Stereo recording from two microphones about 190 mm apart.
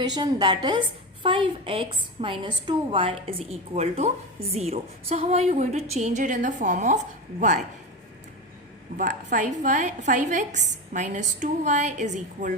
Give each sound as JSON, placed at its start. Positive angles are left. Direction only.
{"t": 0.0, "sound": "a woman's voice", "side_deg": -20}
{"t": 9.0, "sound": "a woman's voice", "side_deg": -40}